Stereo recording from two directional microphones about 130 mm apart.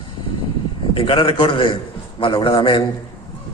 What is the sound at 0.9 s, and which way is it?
A man's voice, 45° left (ahead or behind).